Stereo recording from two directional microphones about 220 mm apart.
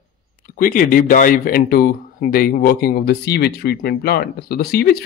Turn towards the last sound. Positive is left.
turn(degrees=45)  # may be behind; listen again after turning